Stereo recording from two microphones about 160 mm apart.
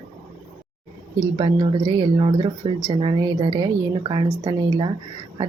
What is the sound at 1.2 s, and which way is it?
Speech, 25° right (ahead or behind).